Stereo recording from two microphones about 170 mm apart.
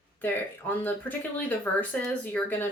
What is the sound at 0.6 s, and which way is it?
Speech, 10° left (ahead or behind).